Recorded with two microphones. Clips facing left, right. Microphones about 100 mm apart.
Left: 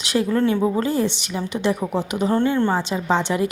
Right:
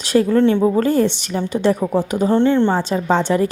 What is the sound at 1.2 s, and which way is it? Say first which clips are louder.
Speech: right 5 dB; 45° right (ahead or behind).